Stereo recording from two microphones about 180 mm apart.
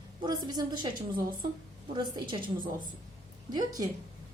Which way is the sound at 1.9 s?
25° right (ahead or behind).